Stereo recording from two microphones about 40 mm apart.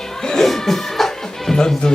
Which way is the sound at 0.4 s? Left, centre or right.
Centre.